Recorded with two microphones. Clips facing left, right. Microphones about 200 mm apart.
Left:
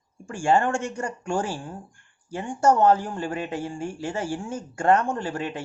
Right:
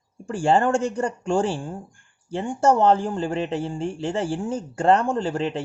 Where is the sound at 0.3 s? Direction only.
35° right (ahead or behind).